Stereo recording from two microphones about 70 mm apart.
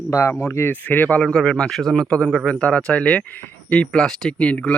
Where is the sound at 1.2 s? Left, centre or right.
Centre.